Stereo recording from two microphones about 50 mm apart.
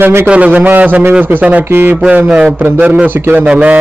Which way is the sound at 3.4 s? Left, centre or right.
Right.